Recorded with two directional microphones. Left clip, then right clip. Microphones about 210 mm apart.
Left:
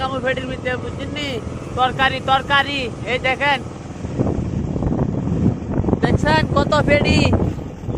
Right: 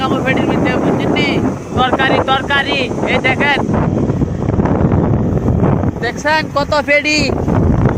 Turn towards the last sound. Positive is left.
turn(degrees=-20)  # may be behind; listen again after turning